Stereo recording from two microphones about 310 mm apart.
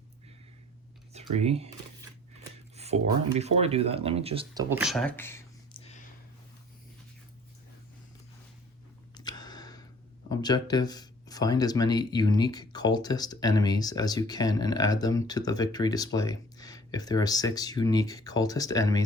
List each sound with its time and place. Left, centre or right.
1.1 s speech: centre
4.7 s speech: centre
9.1 s a sound: centre
10.2 s speech: centre